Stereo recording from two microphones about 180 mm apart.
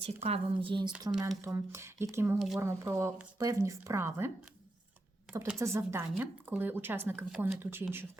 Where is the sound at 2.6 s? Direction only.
15° right (ahead or behind).